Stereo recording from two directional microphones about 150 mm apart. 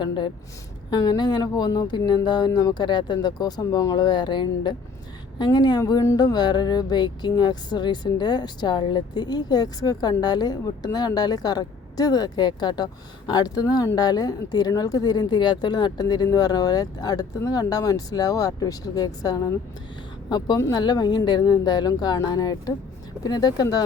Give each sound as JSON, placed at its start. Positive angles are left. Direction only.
{"t": 0.9, "sound": "music", "side_deg": 30}